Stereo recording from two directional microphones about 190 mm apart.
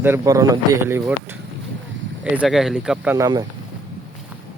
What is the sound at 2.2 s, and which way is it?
Speech, 5° right (ahead or behind).